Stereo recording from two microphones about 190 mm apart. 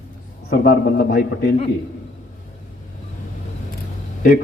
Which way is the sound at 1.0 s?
50° left (ahead or behind).